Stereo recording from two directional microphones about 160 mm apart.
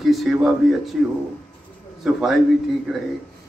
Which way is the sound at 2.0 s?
Centre (ahead or behind).